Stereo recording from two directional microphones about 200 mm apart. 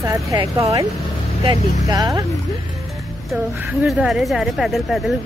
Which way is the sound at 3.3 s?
5° right (ahead or behind).